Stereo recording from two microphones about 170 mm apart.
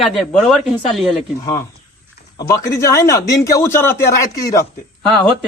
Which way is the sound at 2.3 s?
20° left (ahead or behind).